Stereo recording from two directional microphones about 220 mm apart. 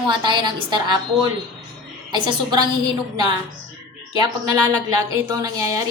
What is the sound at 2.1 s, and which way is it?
Speech, 20° right (ahead or behind).